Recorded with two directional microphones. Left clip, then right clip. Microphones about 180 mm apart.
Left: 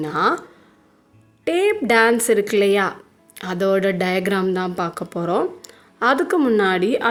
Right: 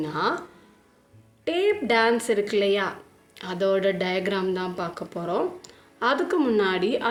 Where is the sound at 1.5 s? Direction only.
55° left (ahead or behind).